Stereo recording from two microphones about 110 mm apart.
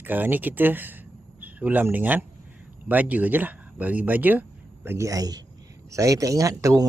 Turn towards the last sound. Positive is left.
turn(degrees=-30)  # may be behind; listen again after turning